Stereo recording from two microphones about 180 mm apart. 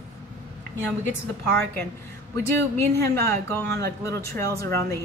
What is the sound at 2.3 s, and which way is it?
Speech, 15° left (ahead or behind).